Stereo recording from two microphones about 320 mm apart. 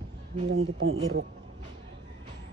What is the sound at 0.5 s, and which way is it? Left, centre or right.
Speech, right.